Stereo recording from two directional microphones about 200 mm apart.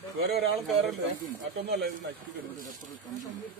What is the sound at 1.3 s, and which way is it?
Speech, 55° right (ahead or behind).